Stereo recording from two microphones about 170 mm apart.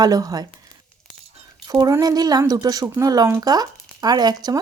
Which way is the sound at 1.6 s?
20° right (ahead or behind).